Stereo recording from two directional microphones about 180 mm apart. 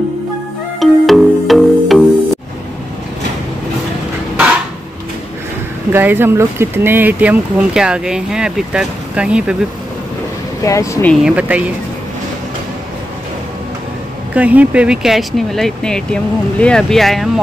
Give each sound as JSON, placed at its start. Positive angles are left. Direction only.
{"t": 0.7, "sound": "music", "side_deg": 0}
{"t": 5.9, "sound": "speech", "side_deg": -10}
{"t": 10.6, "sound": "speech", "side_deg": 15}
{"t": 11.2, "sound": "speech", "side_deg": -5}
{"t": 14.3, "sound": "speech", "side_deg": -10}